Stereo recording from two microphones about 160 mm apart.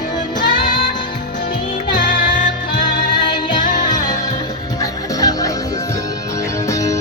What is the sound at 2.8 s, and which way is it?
Music, 30° left (ahead or behind).